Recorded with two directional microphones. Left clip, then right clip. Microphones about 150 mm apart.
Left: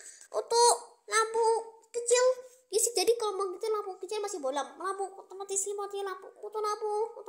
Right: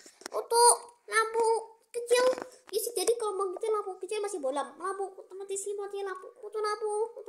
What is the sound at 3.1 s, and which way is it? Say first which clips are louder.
A woman's voice: even; centre (ahead or behind).